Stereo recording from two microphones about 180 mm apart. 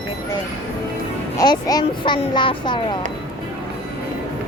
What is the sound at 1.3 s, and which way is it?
Speech, 20° left (ahead or behind).